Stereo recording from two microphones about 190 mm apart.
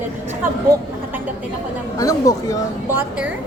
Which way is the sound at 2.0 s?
20° left (ahead or behind).